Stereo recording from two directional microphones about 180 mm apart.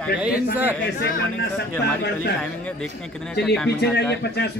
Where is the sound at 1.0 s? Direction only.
70° left (ahead or behind).